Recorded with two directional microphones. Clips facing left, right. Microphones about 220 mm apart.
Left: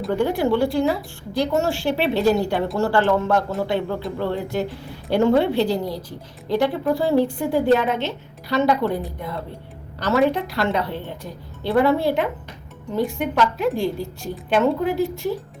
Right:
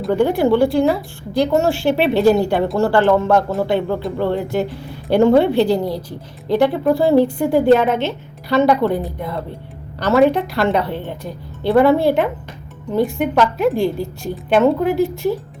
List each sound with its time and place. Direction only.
0.2 s a woman's voice: 60° right (ahead or behind)
10.0 s a woman's voice: 60° right (ahead or behind)